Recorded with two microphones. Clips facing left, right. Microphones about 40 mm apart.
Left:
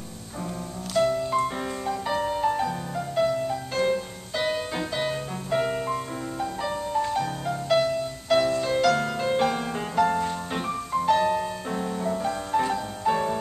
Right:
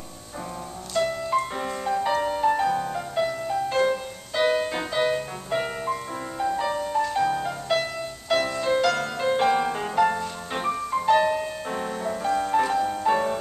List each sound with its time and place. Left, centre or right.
1.0 s music: centre
1.3 s music: centre